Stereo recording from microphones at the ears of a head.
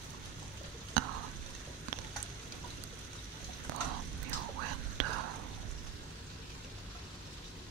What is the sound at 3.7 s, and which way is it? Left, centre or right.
Whispering, right.